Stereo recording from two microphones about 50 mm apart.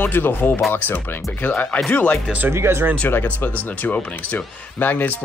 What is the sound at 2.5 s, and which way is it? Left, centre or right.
Speech, right.